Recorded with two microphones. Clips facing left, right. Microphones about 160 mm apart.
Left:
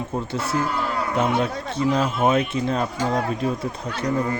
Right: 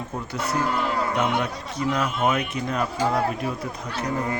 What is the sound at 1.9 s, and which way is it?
Speech, 30° left (ahead or behind).